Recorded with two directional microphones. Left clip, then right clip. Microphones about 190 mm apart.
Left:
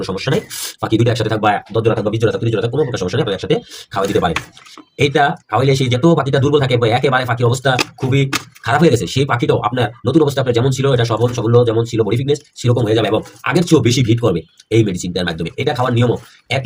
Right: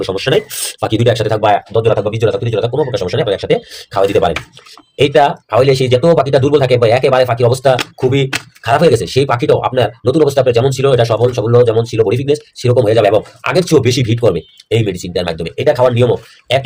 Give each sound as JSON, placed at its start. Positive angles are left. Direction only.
{"t": 0.0, "sound": "speech", "side_deg": -40}